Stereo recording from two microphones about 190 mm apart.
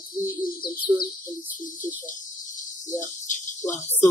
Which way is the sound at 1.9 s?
45° left (ahead or behind).